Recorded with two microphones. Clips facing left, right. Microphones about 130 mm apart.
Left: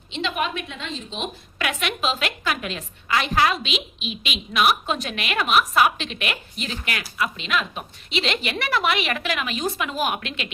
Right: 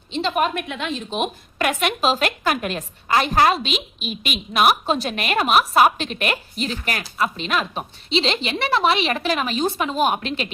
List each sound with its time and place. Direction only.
0.1 s a woman's voice: 40° right (ahead or behind)
0.7 s a woman's voice: 65° right (ahead or behind); by 10.5 s 35° right (ahead or behind)